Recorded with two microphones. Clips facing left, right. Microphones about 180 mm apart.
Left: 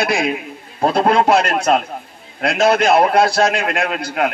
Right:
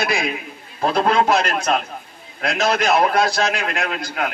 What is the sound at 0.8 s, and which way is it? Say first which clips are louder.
Speech: left 3 dB; 30° left (ahead or behind).